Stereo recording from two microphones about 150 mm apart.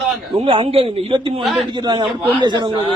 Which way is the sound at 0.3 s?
35° right (ahead or behind).